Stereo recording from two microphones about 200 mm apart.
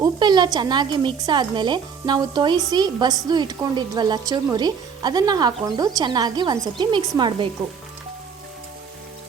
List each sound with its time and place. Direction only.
0.0 s speech: 20° right (ahead or behind)